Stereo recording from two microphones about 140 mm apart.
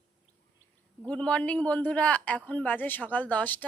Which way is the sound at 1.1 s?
5° left (ahead or behind).